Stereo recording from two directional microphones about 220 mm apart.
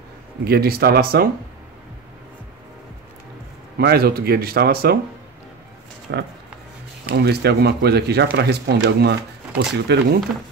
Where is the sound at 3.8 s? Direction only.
45° right (ahead or behind).